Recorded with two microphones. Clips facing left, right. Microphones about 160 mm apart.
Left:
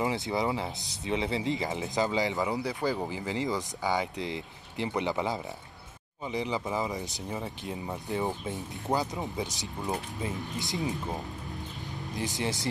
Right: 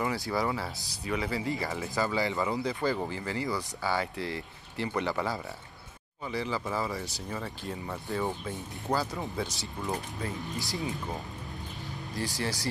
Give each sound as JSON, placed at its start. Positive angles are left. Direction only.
{"t": 0.0, "sound": "speech", "side_deg": 20}
{"t": 12.2, "sound": "speech", "side_deg": 20}